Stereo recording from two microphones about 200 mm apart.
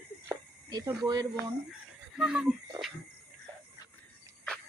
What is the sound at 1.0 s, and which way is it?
Speech, 20° right (ahead or behind).